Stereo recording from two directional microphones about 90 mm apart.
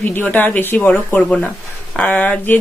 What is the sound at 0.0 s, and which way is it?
Speech, 20° left (ahead or behind).